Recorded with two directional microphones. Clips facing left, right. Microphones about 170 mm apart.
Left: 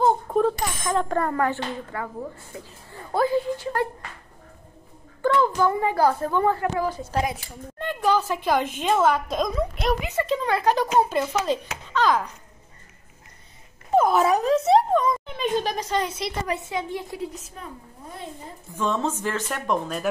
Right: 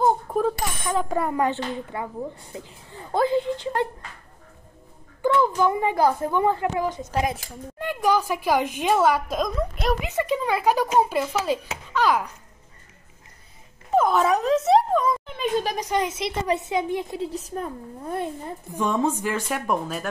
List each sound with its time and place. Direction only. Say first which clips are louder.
0.0 s bicycle bell: left 1 dB; centre (ahead or behind); by 2.0 s 20° right (ahead or behind)
2.5 s speech: right 1 dB; 20° right (ahead or behind)
5.2 s speech: even; 15° right (ahead or behind)
10.0 s speech: even; 15° right (ahead or behind)
13.9 s speech: left 1 dB; centre (ahead or behind); by 17.3 s 20° right (ahead or behind)
17.3 s a woman's voice: right 9 dB; 35° right (ahead or behind)
18.7 s speech: right 2 dB; 15° right (ahead or behind)